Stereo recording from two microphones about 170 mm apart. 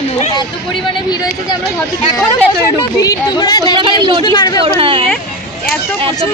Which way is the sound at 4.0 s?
30° right (ahead or behind).